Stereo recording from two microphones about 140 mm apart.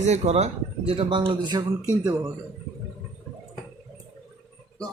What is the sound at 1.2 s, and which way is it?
Speech, 30° right (ahead or behind).